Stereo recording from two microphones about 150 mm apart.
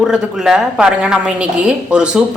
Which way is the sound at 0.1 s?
5° right (ahead or behind).